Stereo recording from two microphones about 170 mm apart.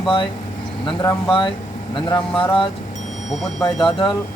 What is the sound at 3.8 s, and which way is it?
Speech, 30° left (ahead or behind).